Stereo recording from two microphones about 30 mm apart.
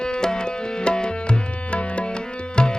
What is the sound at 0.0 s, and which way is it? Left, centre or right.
Tabla, left.